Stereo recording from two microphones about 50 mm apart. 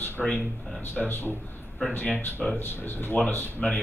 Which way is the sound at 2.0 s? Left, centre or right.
Left.